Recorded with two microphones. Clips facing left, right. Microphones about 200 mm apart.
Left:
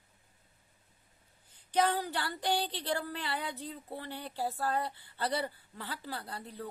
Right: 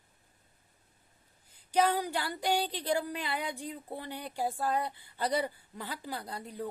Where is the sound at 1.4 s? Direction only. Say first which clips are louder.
Right 2 dB; 10° right (ahead or behind).